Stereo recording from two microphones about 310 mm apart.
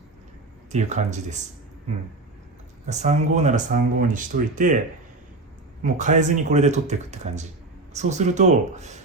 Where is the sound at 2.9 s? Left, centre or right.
Right.